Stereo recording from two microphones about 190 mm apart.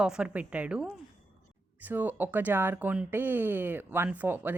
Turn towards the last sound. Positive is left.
turn(degrees=-10)  # may be behind; listen again after turning